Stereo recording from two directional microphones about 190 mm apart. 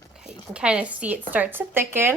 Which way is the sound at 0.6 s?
5° right (ahead or behind).